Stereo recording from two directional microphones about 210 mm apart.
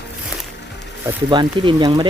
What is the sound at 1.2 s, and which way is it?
Speech, 25° right (ahead or behind).